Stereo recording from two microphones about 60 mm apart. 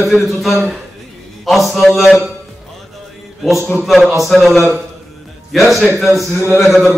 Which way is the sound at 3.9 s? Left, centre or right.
Centre.